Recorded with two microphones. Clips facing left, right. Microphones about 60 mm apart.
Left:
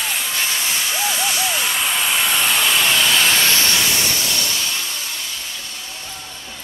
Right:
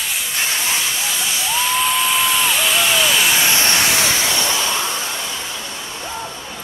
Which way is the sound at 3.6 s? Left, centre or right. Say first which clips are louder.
Right 2 dB; right.